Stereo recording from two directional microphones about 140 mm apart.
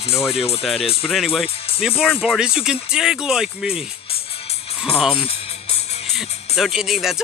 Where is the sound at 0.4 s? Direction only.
45° left (ahead or behind).